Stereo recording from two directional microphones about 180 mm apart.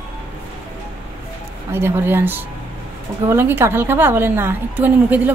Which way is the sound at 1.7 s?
15° right (ahead or behind).